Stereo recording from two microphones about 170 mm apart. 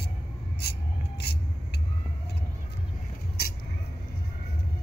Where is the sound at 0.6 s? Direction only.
70° left (ahead or behind).